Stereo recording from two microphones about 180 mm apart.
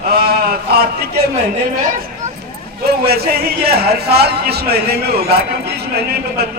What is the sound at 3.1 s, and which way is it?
A man's voice, 60° right (ahead or behind).